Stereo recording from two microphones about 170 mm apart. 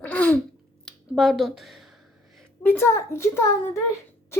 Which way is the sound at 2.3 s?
10° left (ahead or behind).